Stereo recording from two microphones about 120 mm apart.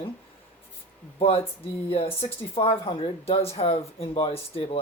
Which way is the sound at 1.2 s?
55° left (ahead or behind).